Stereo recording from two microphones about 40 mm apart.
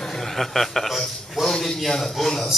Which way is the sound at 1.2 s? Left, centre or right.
Centre.